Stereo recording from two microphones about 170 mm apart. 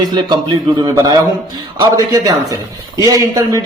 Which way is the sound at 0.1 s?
25° right (ahead or behind).